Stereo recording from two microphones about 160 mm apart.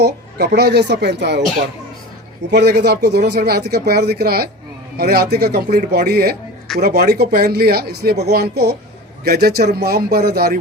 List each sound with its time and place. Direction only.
0.0 s speech: 90° right
2.5 s speech: 90° right